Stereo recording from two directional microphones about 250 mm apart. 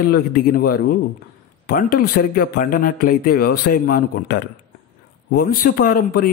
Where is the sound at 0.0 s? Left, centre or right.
Left.